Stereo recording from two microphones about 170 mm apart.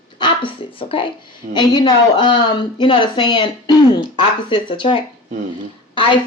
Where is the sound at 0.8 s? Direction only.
30° left (ahead or behind).